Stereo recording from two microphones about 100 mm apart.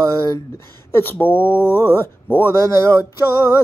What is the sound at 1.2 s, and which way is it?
Mantra, 20° left (ahead or behind).